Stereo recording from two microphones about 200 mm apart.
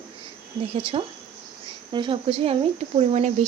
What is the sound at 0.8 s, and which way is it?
A woman's voice, 25° right (ahead or behind).